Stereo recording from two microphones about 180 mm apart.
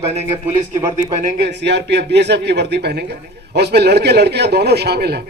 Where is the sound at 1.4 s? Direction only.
75° right (ahead or behind).